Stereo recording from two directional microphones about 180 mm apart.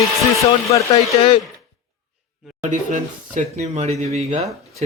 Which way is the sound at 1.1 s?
30° left (ahead or behind).